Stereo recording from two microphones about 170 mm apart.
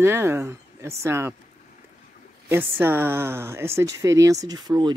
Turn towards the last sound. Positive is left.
turn(degrees=-25)  # may be behind; listen again after turning